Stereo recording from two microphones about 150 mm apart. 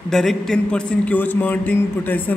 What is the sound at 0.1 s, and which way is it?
A man's voice, 5° left (ahead or behind).